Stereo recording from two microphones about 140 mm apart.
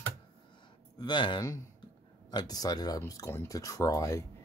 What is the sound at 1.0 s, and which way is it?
Speech, 35° left (ahead or behind).